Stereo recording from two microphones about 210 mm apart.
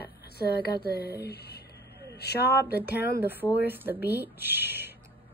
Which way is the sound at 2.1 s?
50° left (ahead or behind).